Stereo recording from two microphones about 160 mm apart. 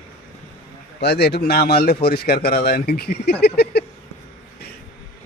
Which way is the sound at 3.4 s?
90° left.